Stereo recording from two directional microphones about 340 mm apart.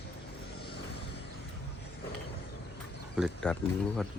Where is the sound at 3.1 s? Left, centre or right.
Centre.